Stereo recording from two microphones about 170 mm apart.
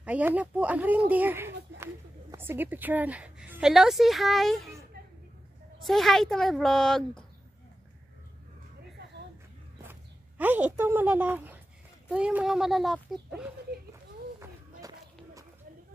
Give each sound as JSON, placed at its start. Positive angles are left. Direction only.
{"t": 0.0, "sound": "a woman's voice", "side_deg": -10}
{"t": 5.9, "sound": "a child's voice", "side_deg": 0}
{"t": 9.8, "sound": "a child's voice", "side_deg": -10}
{"t": 14.4, "sound": "a sound", "side_deg": -20}